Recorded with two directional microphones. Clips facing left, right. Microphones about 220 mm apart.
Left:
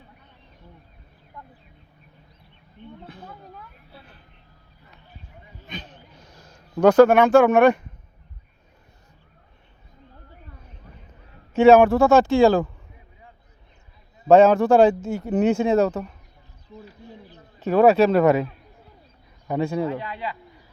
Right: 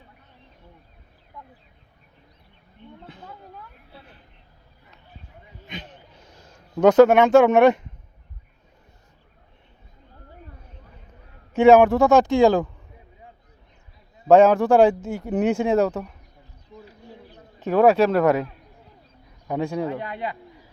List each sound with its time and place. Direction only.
6.2 s a sound: 25° right (ahead or behind)
6.8 s speech: 20° right (ahead or behind)
11.5 s speech: 15° right (ahead or behind)
14.3 s speech: 15° right (ahead or behind)
17.6 s speech: 15° right (ahead or behind)
18.1 s a man's voice: 10° left (ahead or behind)
19.6 s speech: 15° right (ahead or behind)
20.0 s a man's voice: 50° right (ahead or behind)